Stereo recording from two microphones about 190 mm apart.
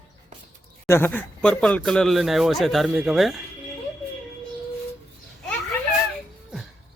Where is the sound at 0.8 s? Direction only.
10° left (ahead or behind).